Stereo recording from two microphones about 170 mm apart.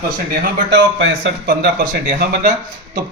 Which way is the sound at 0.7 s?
90° right.